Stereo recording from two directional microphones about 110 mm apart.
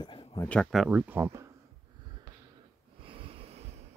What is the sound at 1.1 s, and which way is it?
Speech, 25° right (ahead or behind).